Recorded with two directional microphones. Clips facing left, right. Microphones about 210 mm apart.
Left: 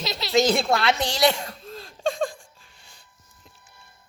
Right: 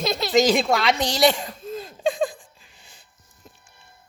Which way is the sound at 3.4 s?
45° right (ahead or behind).